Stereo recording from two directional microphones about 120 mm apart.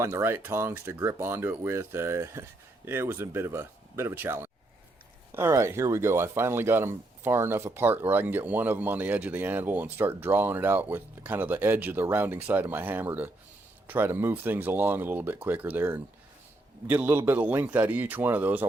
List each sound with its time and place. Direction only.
0.0 s speech: 20° right (ahead or behind)